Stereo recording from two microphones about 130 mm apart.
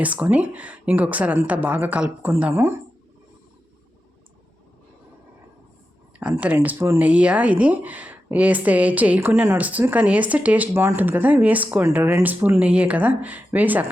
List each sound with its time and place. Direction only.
0.0 s speech: 10° right (ahead or behind)
6.1 s speech: 10° right (ahead or behind)